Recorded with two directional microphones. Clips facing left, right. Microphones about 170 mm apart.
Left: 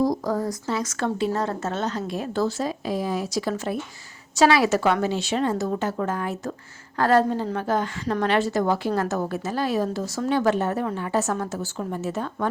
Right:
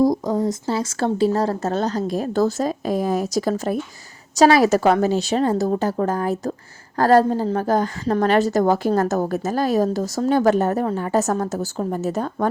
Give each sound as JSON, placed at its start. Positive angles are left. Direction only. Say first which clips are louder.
{"t": 0.3, "sound": "a woman's voice", "louder": "right 4 dB", "side_deg": -20}